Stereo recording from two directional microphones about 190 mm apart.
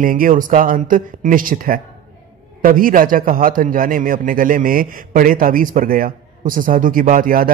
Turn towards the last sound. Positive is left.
turn(degrees=-45)  # may be behind; listen again after turning